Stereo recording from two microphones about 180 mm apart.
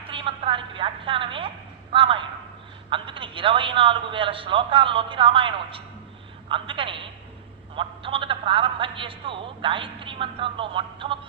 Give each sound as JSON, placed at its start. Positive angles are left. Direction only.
{"t": 0.1, "sound": "a woman's voice", "side_deg": -30}